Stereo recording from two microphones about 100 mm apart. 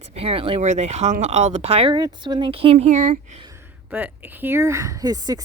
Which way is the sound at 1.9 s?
45° right (ahead or behind).